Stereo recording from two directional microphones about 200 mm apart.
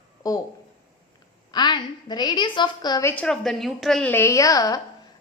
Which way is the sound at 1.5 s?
20° left (ahead or behind).